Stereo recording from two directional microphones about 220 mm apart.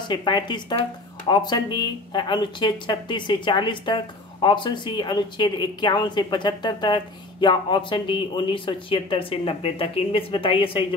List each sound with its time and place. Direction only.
0.1 s speech: 20° left (ahead or behind)